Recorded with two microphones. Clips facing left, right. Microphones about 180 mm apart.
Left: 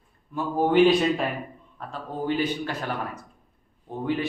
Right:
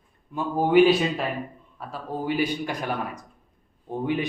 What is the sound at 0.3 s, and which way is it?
Speech, 10° right (ahead or behind).